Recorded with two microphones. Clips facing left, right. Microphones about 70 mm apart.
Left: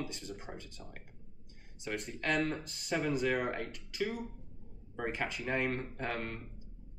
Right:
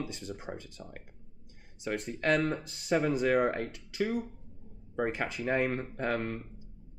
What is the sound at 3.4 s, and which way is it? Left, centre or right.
Speech, right.